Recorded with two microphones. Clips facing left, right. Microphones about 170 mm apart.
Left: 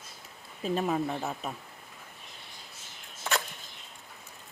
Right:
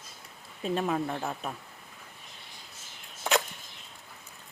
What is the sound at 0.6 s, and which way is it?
Speech, centre (ahead or behind).